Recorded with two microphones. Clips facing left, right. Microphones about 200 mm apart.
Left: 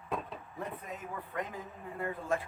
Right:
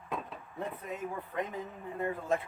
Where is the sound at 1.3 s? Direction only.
20° right (ahead or behind).